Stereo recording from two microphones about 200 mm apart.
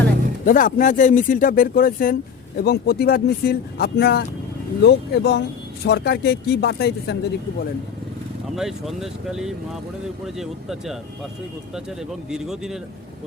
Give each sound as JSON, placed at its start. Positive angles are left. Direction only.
{"t": 0.4, "sound": "speech", "side_deg": 40}
{"t": 8.5, "sound": "speech", "side_deg": 0}
{"t": 12.3, "sound": "speech", "side_deg": 0}